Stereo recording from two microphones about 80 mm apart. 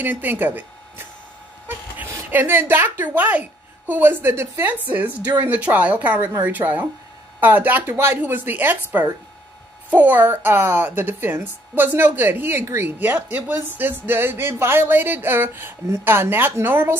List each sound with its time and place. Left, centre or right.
0.0 s speech: right